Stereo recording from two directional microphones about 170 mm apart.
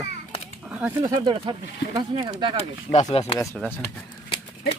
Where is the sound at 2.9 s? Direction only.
40° left (ahead or behind).